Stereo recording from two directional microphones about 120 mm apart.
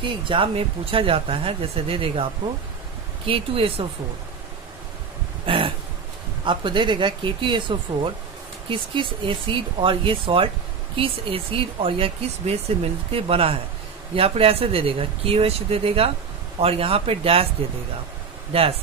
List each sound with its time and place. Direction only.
0.0 s speech: 45° right (ahead or behind)
3.3 s speech: 50° right (ahead or behind)
5.5 s a sound: 45° right (ahead or behind)
6.4 s speech: 40° right (ahead or behind)
18.5 s speech: 55° right (ahead or behind)